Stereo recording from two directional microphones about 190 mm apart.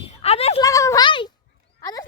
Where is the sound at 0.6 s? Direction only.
15° left (ahead or behind).